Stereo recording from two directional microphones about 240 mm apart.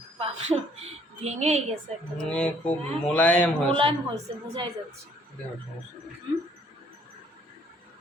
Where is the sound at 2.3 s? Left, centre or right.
Centre.